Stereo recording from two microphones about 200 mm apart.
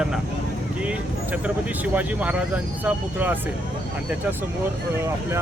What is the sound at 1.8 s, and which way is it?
Speech, 10° right (ahead or behind).